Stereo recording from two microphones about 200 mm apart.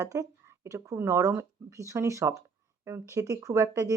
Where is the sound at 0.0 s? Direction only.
15° right (ahead or behind).